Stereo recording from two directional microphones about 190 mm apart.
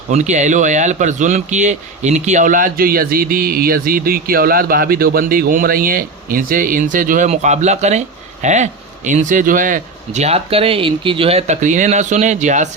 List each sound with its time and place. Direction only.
0.1 s speech: 40° right (ahead or behind)